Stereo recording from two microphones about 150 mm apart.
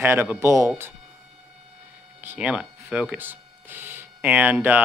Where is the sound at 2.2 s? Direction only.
10° right (ahead or behind).